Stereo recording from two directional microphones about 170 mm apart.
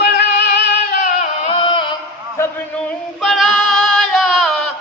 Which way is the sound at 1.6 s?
30° left (ahead or behind).